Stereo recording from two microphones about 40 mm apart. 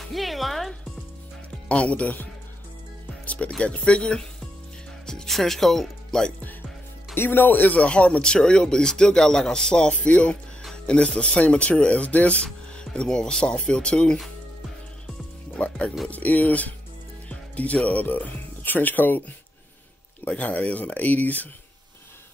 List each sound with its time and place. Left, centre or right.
0.0 s music: centre
1.7 s speech: left
3.1 s music: left
3.4 s speech: left
5.0 s music: centre
5.3 s speech: centre
7.2 s speech: left
7.9 s speech: left
12.7 s speech: left
15.5 s speech: left
16.1 s speech: left
17.8 s speech: left
20.2 s speech: left